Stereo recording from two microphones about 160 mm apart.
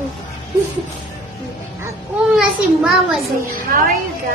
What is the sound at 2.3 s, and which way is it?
Speech, centre (ahead or behind).